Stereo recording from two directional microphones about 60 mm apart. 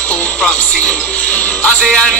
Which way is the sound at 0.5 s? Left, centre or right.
Centre.